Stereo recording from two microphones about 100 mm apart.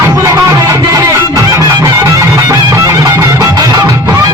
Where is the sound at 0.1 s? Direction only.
35° right (ahead or behind).